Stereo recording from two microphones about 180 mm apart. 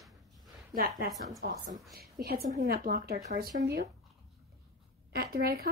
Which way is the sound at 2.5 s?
45° right (ahead or behind).